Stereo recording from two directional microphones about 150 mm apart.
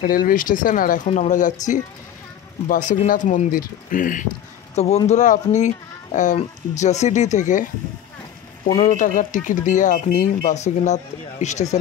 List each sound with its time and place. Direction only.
0.0 s speech: 70° left (ahead or behind)
1.0 s speech: 50° left (ahead or behind)
4.7 s speech: 45° left (ahead or behind)
8.7 s speech: 55° left (ahead or behind)